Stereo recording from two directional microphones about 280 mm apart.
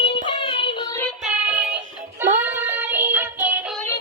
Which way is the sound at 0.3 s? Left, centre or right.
Centre.